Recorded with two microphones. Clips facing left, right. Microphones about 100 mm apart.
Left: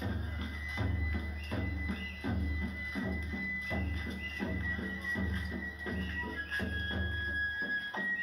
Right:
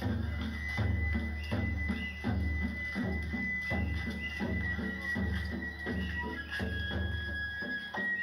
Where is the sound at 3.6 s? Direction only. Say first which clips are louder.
Right 2 dB; 35° left (ahead or behind).